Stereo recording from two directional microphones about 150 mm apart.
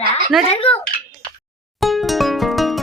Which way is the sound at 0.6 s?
40° left (ahead or behind).